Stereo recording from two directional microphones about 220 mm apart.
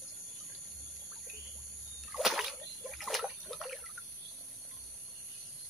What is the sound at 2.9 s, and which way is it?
Water, centre (ahead or behind).